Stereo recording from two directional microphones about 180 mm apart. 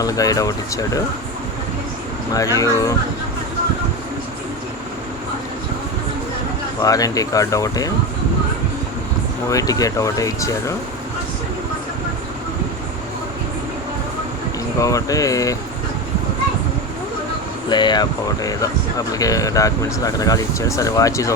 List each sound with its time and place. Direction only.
0.0 s speech: 20° left (ahead or behind)
2.3 s speech: 20° left (ahead or behind)
6.8 s speech: 20° left (ahead or behind)
9.5 s speech: 20° left (ahead or behind)
14.8 s speech: 20° left (ahead or behind)
17.7 s speech: 25° left (ahead or behind)